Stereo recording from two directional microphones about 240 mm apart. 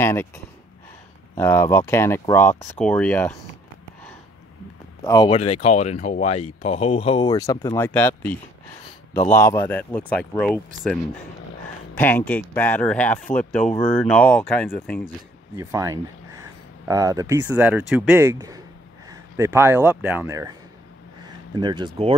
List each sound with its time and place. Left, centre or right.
0.0 s speech: centre
1.3 s speech: centre
5.0 s speech: centre
15.5 s speech: centre
21.5 s speech: centre